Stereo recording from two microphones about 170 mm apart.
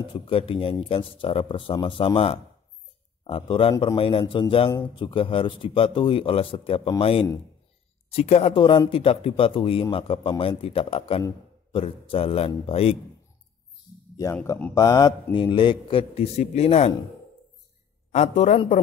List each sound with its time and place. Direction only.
0.1 s speech: 35° left (ahead or behind)
14.1 s speech: 15° left (ahead or behind); by 16.9 s 40° left (ahead or behind)
18.1 s a man's voice: 40° left (ahead or behind)